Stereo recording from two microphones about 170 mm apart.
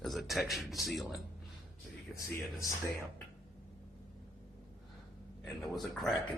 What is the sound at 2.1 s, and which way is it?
Speech, 20° left (ahead or behind).